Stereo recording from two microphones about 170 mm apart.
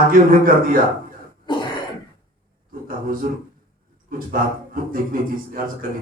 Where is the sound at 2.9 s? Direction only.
55° right (ahead or behind).